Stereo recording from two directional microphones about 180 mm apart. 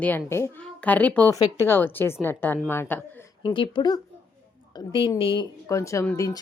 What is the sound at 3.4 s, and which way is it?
A woman's voice, 25° left (ahead or behind).